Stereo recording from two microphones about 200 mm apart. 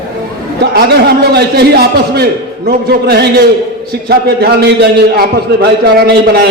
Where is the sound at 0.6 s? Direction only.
50° right (ahead or behind).